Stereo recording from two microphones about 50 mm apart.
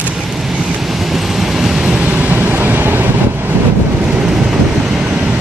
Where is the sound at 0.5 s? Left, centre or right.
Centre.